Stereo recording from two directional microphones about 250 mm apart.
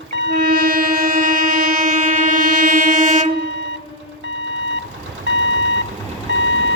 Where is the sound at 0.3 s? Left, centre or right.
Right.